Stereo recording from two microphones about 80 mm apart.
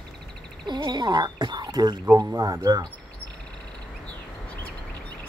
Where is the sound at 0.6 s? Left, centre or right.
Right.